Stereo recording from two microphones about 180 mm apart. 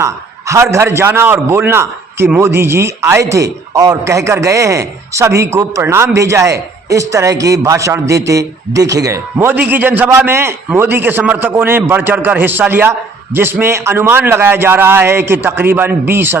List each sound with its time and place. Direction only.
0.0 s a man's voice: 15° right (ahead or behind)